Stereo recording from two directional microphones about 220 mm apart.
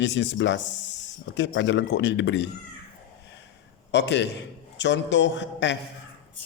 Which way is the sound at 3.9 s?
50° left (ahead or behind).